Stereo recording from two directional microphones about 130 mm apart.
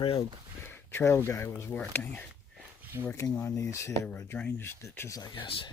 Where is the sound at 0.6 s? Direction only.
20° left (ahead or behind).